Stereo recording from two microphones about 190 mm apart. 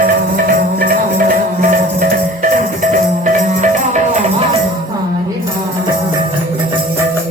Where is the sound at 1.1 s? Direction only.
45° right (ahead or behind).